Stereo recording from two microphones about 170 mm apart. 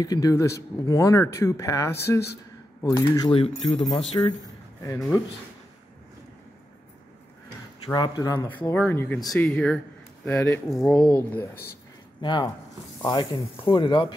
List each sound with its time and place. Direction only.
0.0 s a man's voice: 20° left (ahead or behind)
7.9 s speech: 25° left (ahead or behind)
8.5 s speech: 10° left (ahead or behind)
12.2 s speech: 25° left (ahead or behind)